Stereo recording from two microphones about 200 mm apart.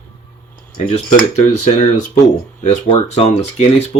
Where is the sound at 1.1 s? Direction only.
35° left (ahead or behind).